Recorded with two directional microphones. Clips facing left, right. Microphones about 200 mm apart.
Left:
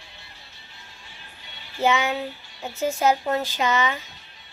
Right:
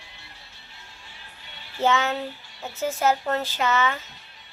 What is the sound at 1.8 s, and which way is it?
A child's voice, 10° left (ahead or behind).